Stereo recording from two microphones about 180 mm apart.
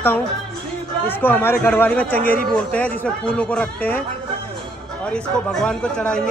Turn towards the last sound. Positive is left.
turn(degrees=5)  # may be behind; listen again after turning